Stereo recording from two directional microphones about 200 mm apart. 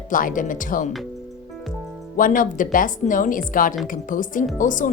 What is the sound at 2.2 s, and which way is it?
Speech, 40° left (ahead or behind).